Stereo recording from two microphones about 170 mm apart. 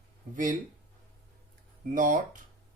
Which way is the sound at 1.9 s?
50° right (ahead or behind).